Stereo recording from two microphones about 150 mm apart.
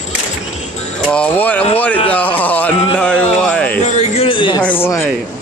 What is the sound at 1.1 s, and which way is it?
Speech, 10° left (ahead or behind).